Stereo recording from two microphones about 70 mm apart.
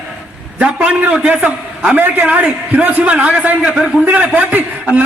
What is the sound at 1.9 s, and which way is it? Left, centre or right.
A man's voice, right.